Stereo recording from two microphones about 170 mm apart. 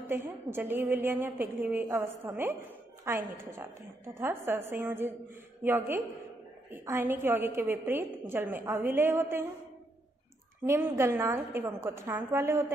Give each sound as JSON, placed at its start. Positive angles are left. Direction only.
{"t": 0.1, "sound": "a woman's voice", "side_deg": -10}
{"t": 10.7, "sound": "a woman's voice", "side_deg": -15}